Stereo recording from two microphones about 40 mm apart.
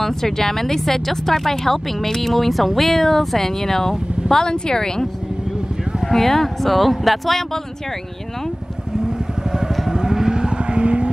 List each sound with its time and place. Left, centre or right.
0.0 s speech: centre
6.0 s speech: centre
9.0 s vehicle: centre